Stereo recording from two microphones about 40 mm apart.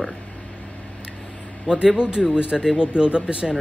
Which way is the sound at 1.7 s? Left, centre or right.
Right.